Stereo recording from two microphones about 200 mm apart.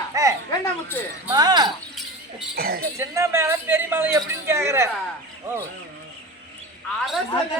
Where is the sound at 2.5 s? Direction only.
50° right (ahead or behind).